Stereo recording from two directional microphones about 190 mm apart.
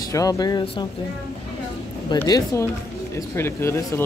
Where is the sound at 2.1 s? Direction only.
15° left (ahead or behind).